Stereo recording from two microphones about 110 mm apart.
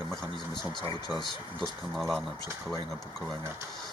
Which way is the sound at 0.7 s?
40° left (ahead or behind).